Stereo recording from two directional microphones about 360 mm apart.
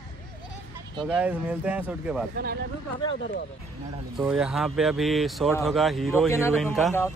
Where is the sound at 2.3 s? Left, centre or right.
Right.